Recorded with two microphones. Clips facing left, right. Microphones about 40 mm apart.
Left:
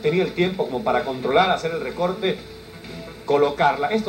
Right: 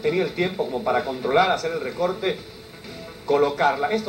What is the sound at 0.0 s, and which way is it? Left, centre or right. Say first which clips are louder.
Speech: left 2 dB; centre.